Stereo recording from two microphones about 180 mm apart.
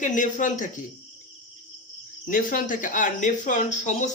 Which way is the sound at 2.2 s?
50° left (ahead or behind).